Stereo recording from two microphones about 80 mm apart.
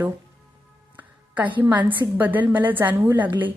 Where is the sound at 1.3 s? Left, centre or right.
Centre.